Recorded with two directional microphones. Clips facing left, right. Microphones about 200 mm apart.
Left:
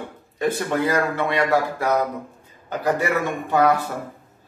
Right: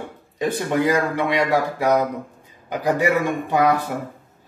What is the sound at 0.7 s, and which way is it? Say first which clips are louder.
Speech: right 5 dB; 15° right (ahead or behind).